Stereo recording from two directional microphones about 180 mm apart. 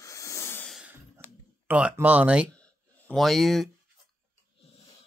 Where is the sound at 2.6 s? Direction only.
5° left (ahead or behind).